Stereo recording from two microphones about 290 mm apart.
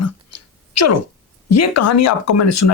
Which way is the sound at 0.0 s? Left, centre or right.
Left.